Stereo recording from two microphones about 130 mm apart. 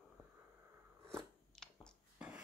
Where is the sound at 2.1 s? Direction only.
10° right (ahead or behind).